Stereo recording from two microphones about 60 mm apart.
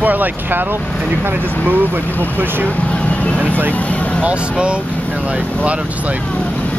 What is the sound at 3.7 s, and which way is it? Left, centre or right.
Speech, left.